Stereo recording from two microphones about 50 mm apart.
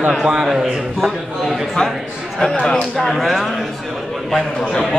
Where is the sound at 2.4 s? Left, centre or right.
Centre.